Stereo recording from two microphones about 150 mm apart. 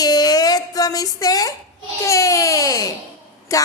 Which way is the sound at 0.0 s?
25° left (ahead or behind).